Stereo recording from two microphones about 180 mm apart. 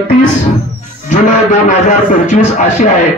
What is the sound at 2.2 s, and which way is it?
Speech, 45° left (ahead or behind).